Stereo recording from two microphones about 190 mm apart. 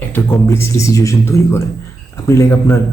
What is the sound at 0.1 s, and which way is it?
A man's voice, 15° left (ahead or behind).